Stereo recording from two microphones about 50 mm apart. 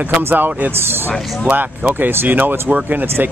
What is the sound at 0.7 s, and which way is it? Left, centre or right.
Speech, right.